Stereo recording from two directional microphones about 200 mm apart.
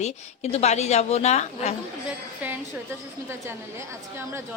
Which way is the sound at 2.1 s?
10° right (ahead or behind).